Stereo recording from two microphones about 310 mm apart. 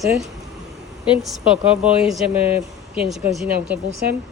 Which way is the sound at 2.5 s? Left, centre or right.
Centre.